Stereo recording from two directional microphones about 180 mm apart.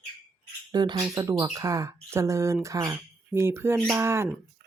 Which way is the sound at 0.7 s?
25° right (ahead or behind).